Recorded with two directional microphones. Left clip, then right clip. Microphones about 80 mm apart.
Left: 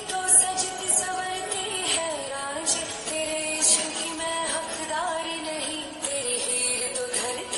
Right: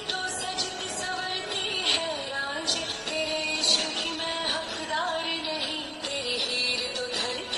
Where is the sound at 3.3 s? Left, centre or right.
Left.